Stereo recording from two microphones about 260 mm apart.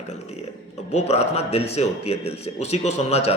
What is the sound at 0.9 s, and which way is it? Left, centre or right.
A man's voice, left.